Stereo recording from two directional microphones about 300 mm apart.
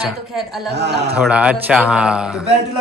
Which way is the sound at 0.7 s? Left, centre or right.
Right.